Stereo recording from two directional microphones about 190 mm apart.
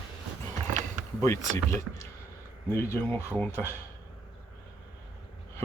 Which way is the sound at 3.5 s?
10° right (ahead or behind).